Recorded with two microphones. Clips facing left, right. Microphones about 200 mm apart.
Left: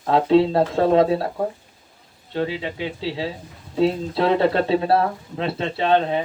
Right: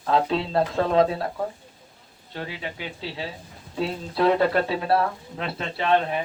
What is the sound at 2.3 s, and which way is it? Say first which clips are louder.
Speech: left 9 dB; 25° left (ahead or behind).